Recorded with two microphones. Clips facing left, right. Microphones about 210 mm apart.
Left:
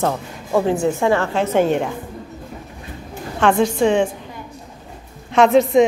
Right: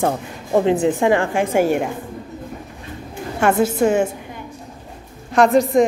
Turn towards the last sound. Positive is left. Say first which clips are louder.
# left 1 dB
turn(degrees=0)  # may be behind; listen again after turning